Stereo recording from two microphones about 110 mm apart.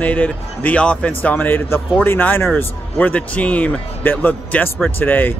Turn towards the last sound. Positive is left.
turn(degrees=15)  # may be behind; listen again after turning